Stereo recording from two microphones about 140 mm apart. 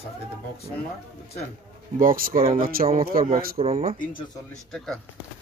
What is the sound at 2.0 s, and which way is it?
A man's voice, 85° right.